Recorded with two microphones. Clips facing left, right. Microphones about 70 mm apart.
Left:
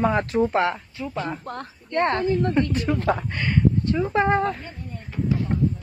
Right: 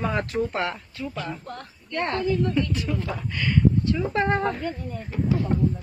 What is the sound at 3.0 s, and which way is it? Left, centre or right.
Speech, left.